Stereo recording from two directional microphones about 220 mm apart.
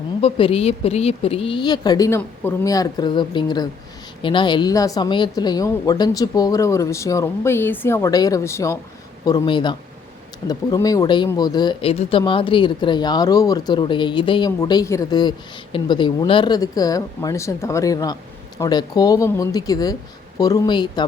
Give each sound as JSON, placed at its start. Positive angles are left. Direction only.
{"t": 0.2, "sound": "speech", "side_deg": 25}